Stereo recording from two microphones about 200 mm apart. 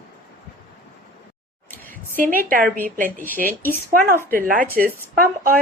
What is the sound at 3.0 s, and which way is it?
Speech, 40° right (ahead or behind).